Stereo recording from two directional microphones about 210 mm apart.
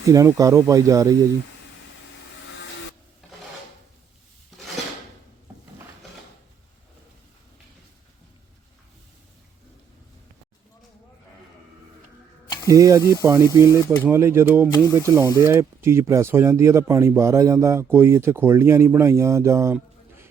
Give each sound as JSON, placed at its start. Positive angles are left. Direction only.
{"t": 0.0, "sound": "speech", "side_deg": -15}
{"t": 12.6, "sound": "speech", "side_deg": -15}